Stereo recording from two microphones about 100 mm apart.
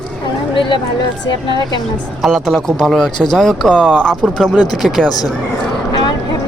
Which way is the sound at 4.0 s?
5° left (ahead or behind).